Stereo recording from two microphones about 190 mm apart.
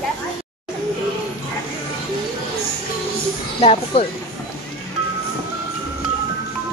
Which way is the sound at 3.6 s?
30° left (ahead or behind).